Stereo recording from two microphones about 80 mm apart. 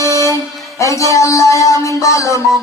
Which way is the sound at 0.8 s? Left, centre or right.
Left.